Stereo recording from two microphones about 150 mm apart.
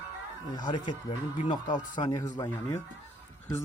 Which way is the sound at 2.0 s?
25° left (ahead or behind).